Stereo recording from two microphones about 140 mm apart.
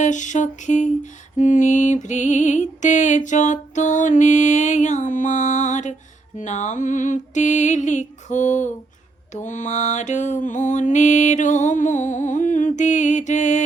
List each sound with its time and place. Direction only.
0.0 s lullaby: 60° left (ahead or behind)